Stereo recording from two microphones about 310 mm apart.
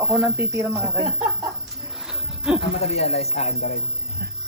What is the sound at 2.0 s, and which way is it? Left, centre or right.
Wild animals, centre.